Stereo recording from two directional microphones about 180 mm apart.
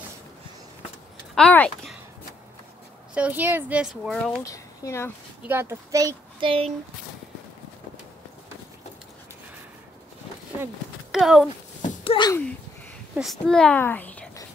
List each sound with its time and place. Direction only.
1.3 s speech: 5° left (ahead or behind)
3.2 s speech: 10° right (ahead or behind)
4.5 s speech: 15° left (ahead or behind)
5.5 s speech: 15° right (ahead or behind)
6.4 s speech: 30° right (ahead or behind)
10.6 s a sound: 5° right (ahead or behind)
12.0 s a sound: 30° left (ahead or behind)
12.3 s speech: 10° left (ahead or behind)
13.1 s a child's voice: centre (ahead or behind)